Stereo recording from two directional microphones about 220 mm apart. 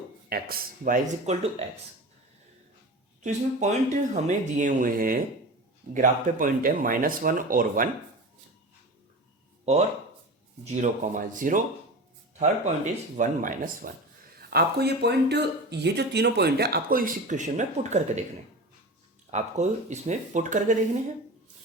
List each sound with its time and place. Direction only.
0.3 s speech: 40° right (ahead or behind)
3.2 s speech: 30° right (ahead or behind)
10.8 s speech: 35° right (ahead or behind)
19.3 s speech: 30° right (ahead or behind)